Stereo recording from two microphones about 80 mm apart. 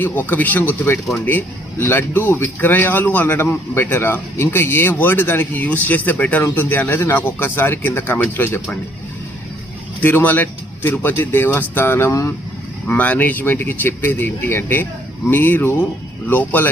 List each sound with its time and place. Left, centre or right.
0.0 s speech: left
10.0 s speech: left